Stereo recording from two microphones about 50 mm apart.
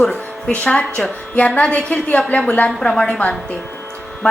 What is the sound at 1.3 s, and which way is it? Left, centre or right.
A woman's voice, left.